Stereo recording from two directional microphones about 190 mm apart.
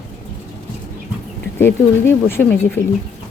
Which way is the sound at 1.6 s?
10° left (ahead or behind).